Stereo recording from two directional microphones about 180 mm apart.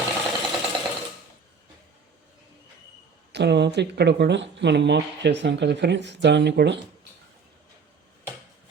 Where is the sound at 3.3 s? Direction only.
70° right (ahead or behind).